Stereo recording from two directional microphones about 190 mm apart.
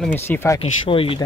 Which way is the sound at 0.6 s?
30° left (ahead or behind).